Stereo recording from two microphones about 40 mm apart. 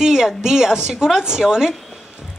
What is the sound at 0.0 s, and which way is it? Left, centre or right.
A man's voice, centre.